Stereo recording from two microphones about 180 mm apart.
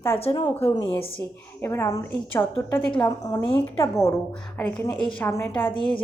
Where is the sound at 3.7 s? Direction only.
15° left (ahead or behind).